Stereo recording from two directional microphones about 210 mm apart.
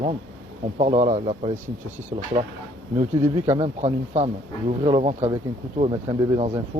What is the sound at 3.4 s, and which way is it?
Speech, 30° right (ahead or behind).